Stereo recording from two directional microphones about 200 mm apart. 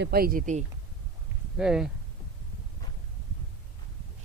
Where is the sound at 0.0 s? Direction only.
50° right (ahead or behind).